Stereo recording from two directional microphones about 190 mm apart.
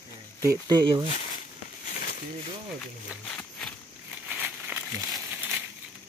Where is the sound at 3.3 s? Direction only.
5° left (ahead or behind).